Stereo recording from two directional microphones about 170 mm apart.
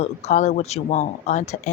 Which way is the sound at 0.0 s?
40° left (ahead or behind).